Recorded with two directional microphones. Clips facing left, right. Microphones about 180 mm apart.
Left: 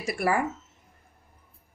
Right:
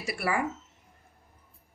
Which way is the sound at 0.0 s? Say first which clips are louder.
Left 4 dB; 45° left (ahead or behind).